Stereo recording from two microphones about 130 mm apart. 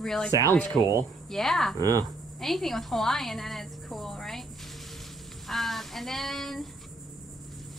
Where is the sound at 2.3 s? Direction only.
Centre (ahead or behind).